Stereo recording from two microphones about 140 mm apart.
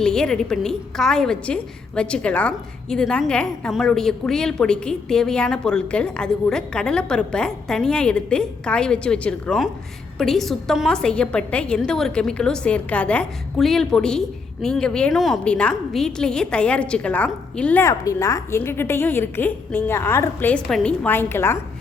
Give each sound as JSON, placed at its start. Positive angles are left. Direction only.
{"t": 0.0, "sound": "a woman's voice", "side_deg": 5}
{"t": 17.8, "sound": "a woman's voice", "side_deg": 20}
{"t": 20.7, "sound": "a woman's voice", "side_deg": 5}